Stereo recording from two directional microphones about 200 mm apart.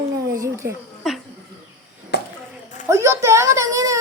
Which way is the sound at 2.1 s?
55° left (ahead or behind).